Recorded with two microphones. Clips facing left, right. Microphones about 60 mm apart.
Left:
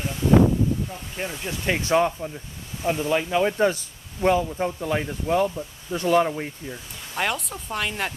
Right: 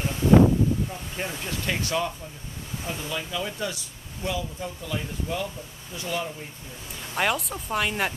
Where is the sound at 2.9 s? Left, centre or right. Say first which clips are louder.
Left 10 dB; left.